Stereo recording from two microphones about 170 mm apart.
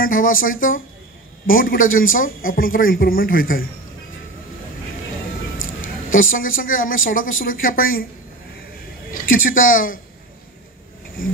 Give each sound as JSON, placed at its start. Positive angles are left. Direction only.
{"t": 0.0, "sound": "a man's voice", "side_deg": 55}
{"t": 6.3, "sound": "a man's voice", "side_deg": 55}
{"t": 9.1, "sound": "speech", "side_deg": 55}